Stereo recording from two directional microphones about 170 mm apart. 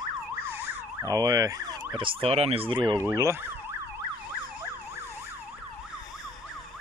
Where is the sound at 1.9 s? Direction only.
30° right (ahead or behind).